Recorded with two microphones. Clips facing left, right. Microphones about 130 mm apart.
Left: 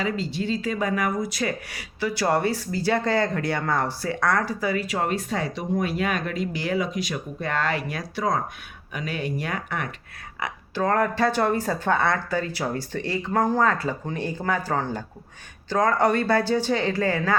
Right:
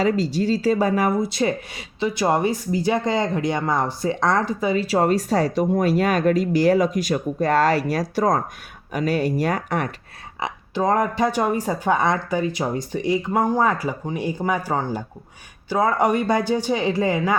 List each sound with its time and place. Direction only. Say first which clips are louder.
0.0 s speech: right 7 dB; 40° right (ahead or behind)
10.4 s speech: right 3 dB; 15° right (ahead or behind)